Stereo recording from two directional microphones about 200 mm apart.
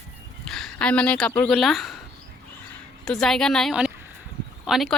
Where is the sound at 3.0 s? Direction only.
5° left (ahead or behind).